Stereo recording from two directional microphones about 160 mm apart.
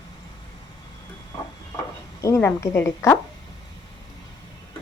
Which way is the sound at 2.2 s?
20° left (ahead or behind).